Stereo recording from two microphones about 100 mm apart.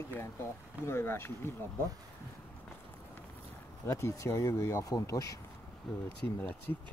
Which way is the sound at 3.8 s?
30° left (ahead or behind).